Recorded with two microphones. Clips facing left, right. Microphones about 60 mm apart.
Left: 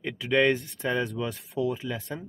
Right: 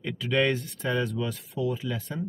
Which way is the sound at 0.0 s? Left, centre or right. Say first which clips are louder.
Left 2 dB; centre.